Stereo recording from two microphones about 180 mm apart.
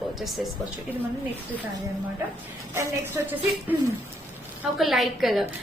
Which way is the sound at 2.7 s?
15° right (ahead or behind).